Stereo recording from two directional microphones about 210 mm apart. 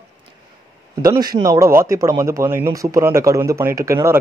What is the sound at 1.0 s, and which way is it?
Speech, 20° right (ahead or behind).